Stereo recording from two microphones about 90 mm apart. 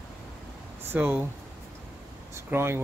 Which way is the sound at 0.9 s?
20° right (ahead or behind).